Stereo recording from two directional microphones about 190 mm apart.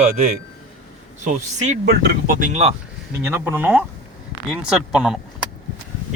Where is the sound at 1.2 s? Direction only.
45° right (ahead or behind).